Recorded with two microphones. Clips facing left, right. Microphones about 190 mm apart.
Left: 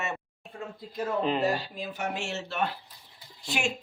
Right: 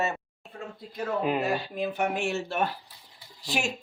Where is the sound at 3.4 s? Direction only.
35° right (ahead or behind).